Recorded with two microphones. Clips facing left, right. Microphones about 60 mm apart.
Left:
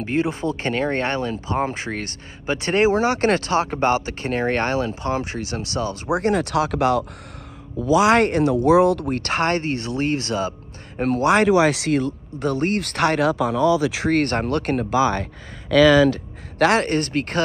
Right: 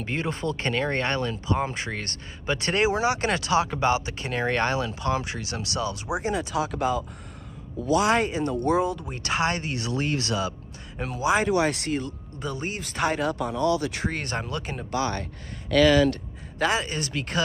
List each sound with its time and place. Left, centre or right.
0.0 s speech: centre
3.0 s speech: left
6.1 s speech: left
11.0 s speech: left
16.5 s speech: left